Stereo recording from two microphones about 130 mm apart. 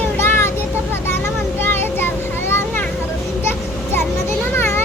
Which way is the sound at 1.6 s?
15° left (ahead or behind).